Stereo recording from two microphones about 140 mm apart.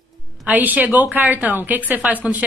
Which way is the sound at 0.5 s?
10° right (ahead or behind).